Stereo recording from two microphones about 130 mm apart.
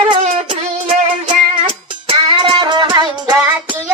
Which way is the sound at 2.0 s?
35° right (ahead or behind).